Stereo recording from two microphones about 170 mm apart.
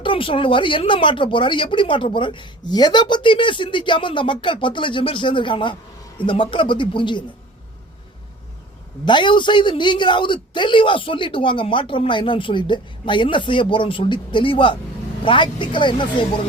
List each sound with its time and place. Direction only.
0.0 s speech: 30° left (ahead or behind)
9.0 s speech: 25° left (ahead or behind)